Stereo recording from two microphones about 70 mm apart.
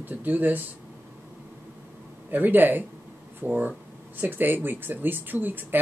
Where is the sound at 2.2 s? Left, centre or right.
Right.